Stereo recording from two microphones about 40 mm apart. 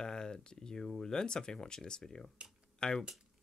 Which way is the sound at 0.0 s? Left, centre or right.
Centre.